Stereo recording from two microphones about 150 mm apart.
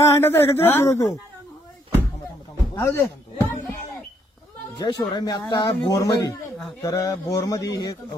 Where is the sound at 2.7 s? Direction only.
15° left (ahead or behind).